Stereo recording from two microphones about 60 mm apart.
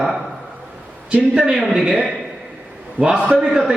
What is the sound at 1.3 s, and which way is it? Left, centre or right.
Speech, centre.